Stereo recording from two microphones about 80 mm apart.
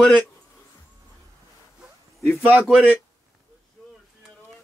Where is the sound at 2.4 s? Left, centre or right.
Centre.